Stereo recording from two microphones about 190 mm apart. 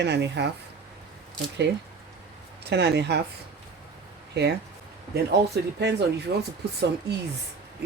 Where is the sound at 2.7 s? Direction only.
60° right (ahead or behind).